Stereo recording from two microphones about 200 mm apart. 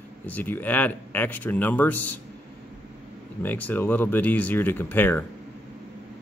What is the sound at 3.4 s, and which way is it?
Speech, 10° left (ahead or behind).